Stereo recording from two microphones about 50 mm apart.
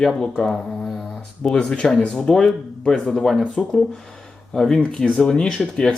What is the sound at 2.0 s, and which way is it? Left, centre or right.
Speech, centre.